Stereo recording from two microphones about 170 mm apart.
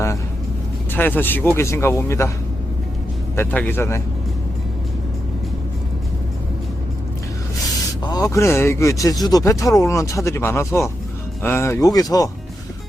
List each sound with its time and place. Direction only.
0.9 s speech: 10° left (ahead or behind)
3.3 s speech: 10° left (ahead or behind)
8.0 s speech: 20° left (ahead or behind)